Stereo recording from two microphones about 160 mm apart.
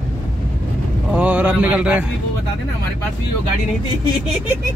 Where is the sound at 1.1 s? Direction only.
10° right (ahead or behind).